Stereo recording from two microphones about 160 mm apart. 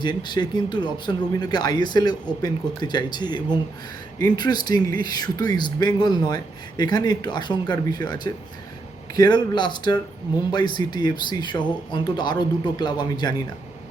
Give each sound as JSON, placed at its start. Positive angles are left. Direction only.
{"t": 0.0, "sound": "speech", "side_deg": 30}